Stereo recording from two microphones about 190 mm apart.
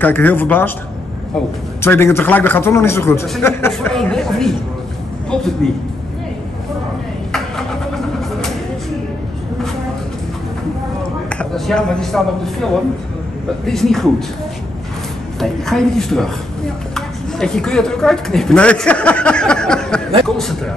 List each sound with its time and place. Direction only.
0.0 s a man's voice: 10° left (ahead or behind)
1.8 s a man's voice: 15° left (ahead or behind)
11.2 s a woman's voice: 5° left (ahead or behind)
15.4 s a woman's voice: centre (ahead or behind)